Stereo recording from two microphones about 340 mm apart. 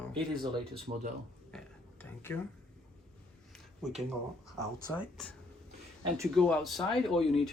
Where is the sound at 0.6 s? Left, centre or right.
Right.